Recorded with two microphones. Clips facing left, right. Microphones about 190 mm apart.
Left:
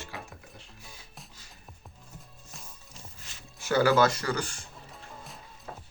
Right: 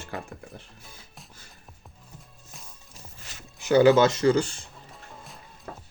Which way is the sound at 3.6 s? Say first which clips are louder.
Right 6 dB; 20° right (ahead or behind).